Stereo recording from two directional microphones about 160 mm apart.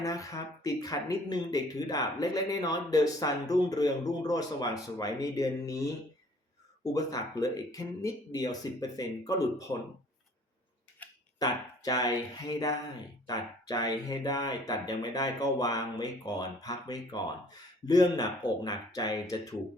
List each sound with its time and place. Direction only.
0.0 s speech: 20° left (ahead or behind)
6.8 s speech: 20° left (ahead or behind)
11.0 s a sound: 10° left (ahead or behind)
11.3 s speech: 25° left (ahead or behind)